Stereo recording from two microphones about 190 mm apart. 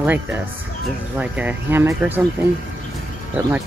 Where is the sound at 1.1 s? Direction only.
10° right (ahead or behind).